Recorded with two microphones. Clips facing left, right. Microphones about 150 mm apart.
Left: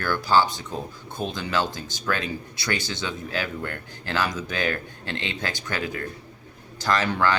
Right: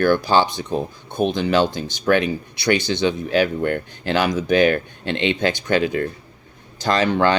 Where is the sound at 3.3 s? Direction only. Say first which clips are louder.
Right 12 dB; 70° right (ahead or behind).